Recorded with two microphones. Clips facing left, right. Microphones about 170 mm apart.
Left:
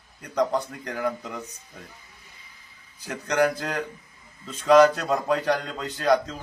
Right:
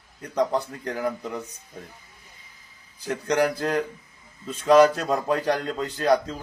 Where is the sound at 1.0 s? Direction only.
10° right (ahead or behind).